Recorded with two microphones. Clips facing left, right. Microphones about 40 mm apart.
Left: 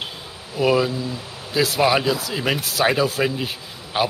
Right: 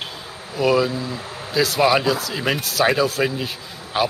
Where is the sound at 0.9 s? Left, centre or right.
Right.